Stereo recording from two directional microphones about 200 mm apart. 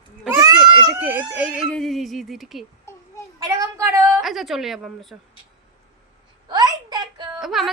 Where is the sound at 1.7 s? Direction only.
Centre (ahead or behind).